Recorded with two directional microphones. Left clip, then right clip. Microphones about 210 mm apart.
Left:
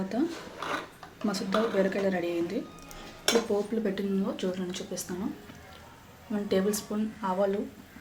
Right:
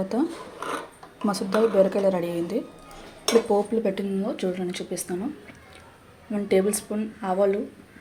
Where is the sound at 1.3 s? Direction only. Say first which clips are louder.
Right 6 dB; 20° right (ahead or behind).